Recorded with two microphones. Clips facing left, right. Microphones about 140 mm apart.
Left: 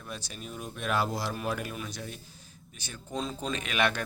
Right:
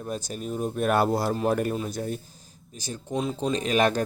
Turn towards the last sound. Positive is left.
turn(degrees=-40)  # may be behind; listen again after turning